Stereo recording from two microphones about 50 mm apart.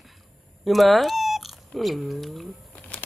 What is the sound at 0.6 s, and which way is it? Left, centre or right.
Speech, centre.